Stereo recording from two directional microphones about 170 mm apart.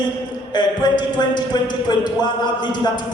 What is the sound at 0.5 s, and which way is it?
A man's voice, 25° left (ahead or behind).